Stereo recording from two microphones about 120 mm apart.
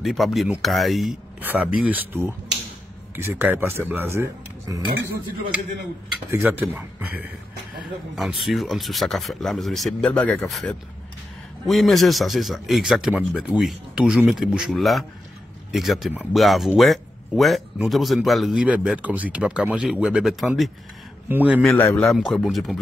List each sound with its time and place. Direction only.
0.0 s speech: centre (ahead or behind)
1.4 s speech: 15° right (ahead or behind)
6.6 s speech: 15° right (ahead or behind)
7.8 s speech: centre (ahead or behind)
21.3 s speech: 15° right (ahead or behind)
21.5 s speech: 10° left (ahead or behind)